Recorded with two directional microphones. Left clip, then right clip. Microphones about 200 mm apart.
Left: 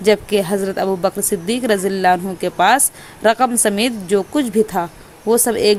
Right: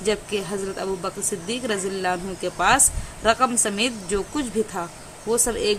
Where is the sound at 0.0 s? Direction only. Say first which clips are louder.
Left 10 dB; 30° left (ahead or behind).